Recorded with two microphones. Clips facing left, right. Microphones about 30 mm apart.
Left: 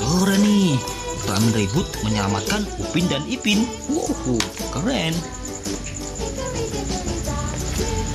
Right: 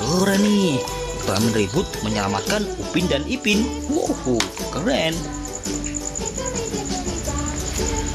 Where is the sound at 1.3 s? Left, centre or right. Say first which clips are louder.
Right 1 dB; centre.